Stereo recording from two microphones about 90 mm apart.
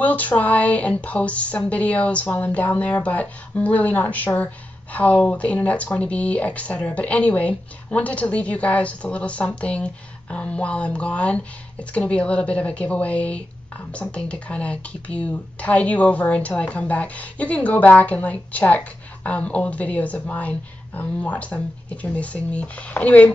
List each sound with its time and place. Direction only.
0.0 s speech: 15° left (ahead or behind)